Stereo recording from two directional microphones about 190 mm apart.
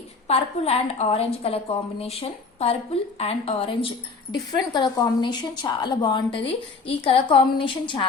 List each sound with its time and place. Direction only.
0.3 s a woman's voice: 35° left (ahead or behind)